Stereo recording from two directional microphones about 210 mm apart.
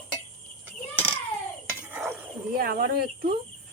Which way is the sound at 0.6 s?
5° right (ahead or behind).